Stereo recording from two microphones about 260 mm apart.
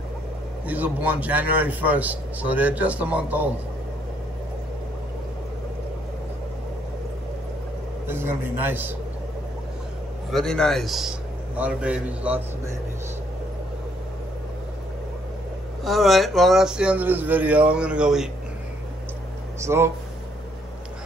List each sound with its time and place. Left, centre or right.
0.7 s a man's voice: centre
8.1 s a man's voice: centre
10.3 s a man's voice: centre
15.8 s a man's voice: centre
19.6 s a man's voice: centre